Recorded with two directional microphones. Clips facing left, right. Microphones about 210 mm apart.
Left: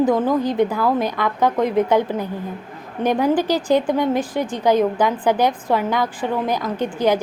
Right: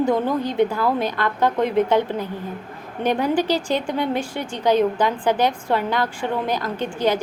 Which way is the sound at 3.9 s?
45° left (ahead or behind).